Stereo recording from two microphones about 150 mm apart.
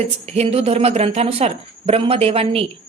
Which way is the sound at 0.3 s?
45° right (ahead or behind).